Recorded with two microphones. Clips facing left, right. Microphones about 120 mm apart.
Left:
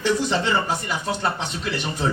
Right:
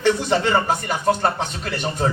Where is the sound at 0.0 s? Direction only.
55° right (ahead or behind).